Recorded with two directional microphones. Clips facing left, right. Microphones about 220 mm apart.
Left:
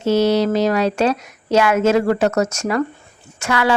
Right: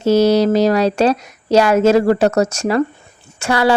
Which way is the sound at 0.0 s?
40° right (ahead or behind).